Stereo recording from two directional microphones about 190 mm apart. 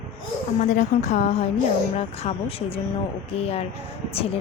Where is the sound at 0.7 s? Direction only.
40° left (ahead or behind).